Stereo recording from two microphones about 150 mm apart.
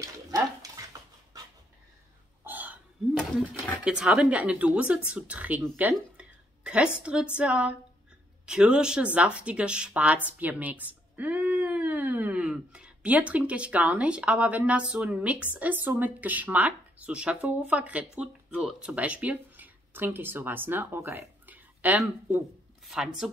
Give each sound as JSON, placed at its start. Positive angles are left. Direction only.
{"t": 0.0, "sound": "bathtub", "side_deg": -25}
{"t": 2.4, "sound": "a sound", "side_deg": -10}
{"t": 3.8, "sound": "a woman's voice", "side_deg": -5}